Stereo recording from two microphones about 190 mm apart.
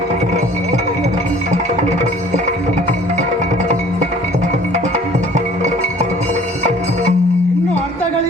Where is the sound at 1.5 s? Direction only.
35° right (ahead or behind).